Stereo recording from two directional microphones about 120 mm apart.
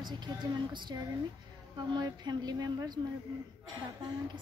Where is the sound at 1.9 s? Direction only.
35° right (ahead or behind).